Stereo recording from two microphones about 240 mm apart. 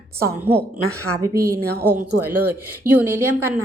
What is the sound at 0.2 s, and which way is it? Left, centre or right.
Speech, centre.